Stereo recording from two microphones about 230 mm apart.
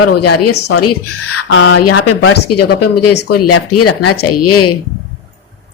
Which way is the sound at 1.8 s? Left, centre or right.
Left.